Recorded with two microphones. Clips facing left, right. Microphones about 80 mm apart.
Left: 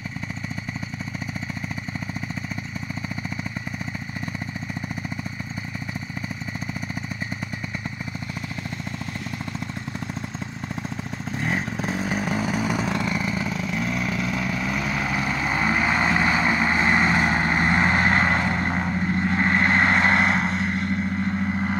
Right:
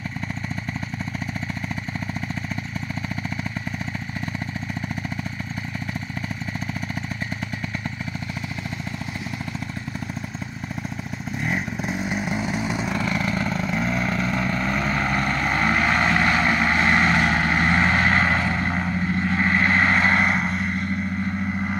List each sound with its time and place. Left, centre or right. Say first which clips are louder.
11.5 s vehicle: left 1 dB; left
13.0 s vehicle: right 1 dB; centre